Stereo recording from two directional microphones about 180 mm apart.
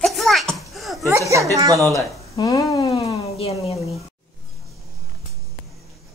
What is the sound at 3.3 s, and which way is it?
Speech, 35° left (ahead or behind).